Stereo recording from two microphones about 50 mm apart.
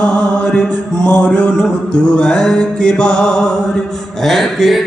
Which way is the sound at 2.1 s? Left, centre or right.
Centre.